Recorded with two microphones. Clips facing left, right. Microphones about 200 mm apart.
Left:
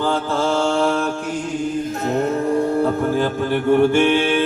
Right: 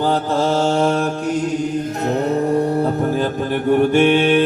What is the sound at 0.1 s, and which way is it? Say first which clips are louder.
Mantra: right 2 dB; 40° right (ahead or behind).